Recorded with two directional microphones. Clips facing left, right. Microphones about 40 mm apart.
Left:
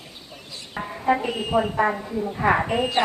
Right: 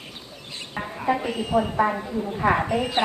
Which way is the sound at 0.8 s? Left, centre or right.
Right.